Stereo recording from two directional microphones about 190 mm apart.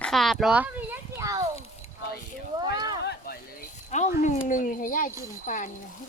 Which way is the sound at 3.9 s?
40° left (ahead or behind).